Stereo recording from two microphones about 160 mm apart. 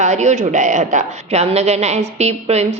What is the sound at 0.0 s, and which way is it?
A woman's voice, 45° right (ahead or behind).